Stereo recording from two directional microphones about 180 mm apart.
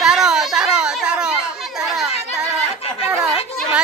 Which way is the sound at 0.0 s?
5° right (ahead or behind).